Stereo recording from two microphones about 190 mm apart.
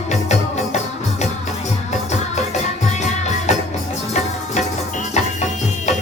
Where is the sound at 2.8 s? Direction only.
35° left (ahead or behind).